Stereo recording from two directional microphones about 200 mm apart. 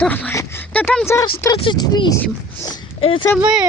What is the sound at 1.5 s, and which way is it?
Speech, 25° left (ahead or behind).